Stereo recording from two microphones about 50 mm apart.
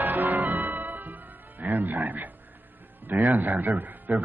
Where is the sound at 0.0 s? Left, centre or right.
Right.